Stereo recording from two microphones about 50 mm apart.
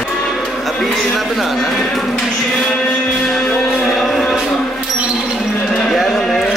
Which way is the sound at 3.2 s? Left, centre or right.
Centre.